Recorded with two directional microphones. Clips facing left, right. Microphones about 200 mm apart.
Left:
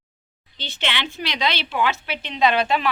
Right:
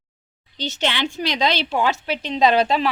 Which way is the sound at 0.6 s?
40° right (ahead or behind).